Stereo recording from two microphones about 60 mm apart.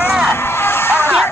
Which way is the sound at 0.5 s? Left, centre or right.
Left.